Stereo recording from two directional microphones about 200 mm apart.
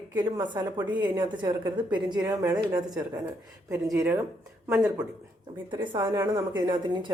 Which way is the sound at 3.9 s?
10° right (ahead or behind).